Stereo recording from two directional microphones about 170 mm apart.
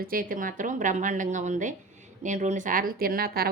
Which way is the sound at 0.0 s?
55° right (ahead or behind).